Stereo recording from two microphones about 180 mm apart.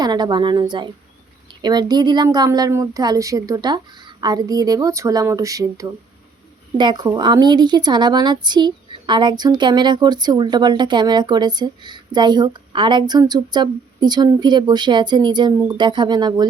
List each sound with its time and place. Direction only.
0.0 s a woman's voice: 20° right (ahead or behind)